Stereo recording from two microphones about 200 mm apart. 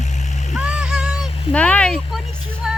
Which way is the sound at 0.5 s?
5° right (ahead or behind).